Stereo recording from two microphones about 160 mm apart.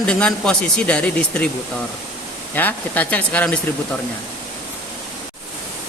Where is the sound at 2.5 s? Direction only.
10° left (ahead or behind).